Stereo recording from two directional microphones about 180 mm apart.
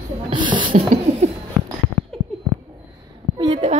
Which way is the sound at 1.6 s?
5° right (ahead or behind).